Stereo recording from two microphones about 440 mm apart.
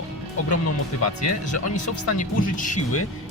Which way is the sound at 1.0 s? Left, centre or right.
Left.